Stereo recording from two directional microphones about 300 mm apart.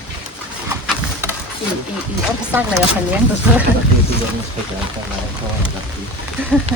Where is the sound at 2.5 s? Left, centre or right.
Centre.